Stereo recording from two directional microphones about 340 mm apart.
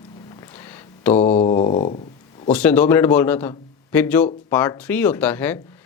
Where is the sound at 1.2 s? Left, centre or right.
Centre.